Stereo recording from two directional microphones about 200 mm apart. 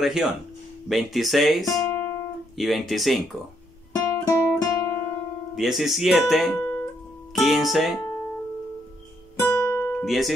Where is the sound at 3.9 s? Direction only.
15° left (ahead or behind).